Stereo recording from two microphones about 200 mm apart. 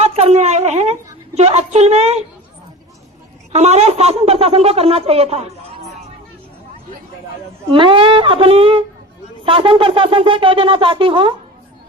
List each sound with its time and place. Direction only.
0.0 s a sound: 30° right (ahead or behind)
1.4 s a woman's voice: 30° right (ahead or behind)
3.5 s a woman's voice: 35° right (ahead or behind)
7.7 s wind instrument: 25° right (ahead or behind)